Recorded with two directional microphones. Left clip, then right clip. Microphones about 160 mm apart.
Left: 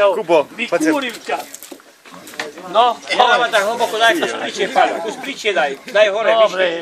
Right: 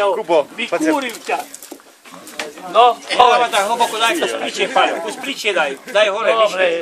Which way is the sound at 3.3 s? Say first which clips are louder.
Even; 55° right (ahead or behind).